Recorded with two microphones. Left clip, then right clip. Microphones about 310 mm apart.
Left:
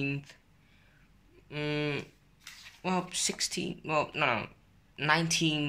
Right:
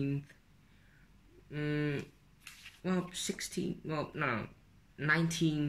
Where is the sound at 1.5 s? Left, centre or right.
Centre.